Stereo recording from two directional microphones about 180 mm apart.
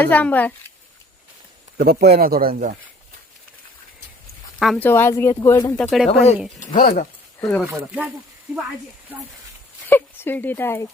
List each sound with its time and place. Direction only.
0.0 s speech: 10° left (ahead or behind)
1.8 s speech: 60° right (ahead or behind)
4.6 s speech: centre (ahead or behind)
4.9 s speech: 10° left (ahead or behind)
5.7 s speech: 5° left (ahead or behind)
6.1 s speech: 35° left (ahead or behind)
6.6 s speech: 50° left (ahead or behind)
7.7 s speech: 5° right (ahead or behind)
9.8 s speech: 10° left (ahead or behind)